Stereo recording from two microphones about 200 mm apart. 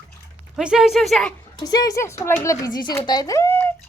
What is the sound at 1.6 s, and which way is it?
Speech, 20° left (ahead or behind).